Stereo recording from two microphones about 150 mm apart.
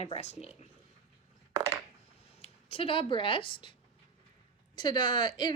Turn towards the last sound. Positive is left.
turn(degrees=30)  # may be behind; listen again after turning